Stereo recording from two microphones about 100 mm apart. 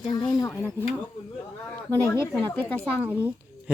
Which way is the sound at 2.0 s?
25° left (ahead or behind).